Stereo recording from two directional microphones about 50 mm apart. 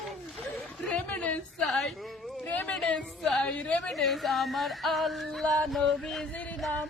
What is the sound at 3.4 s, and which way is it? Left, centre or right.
Speech, left.